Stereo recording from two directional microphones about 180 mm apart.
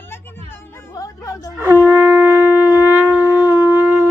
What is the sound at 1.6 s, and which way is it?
Shofar, 10° right (ahead or behind).